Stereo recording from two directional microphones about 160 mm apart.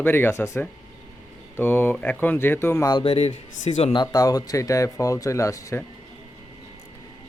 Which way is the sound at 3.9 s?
25° left (ahead or behind).